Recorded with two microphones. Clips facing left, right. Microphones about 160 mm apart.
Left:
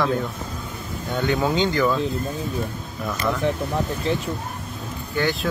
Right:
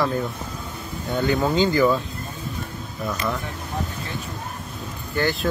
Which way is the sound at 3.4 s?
90° left.